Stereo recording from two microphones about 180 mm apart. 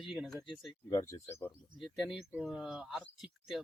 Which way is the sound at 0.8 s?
15° left (ahead or behind).